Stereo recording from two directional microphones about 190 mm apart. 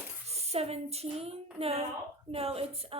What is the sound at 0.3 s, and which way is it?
Speech, 35° right (ahead or behind).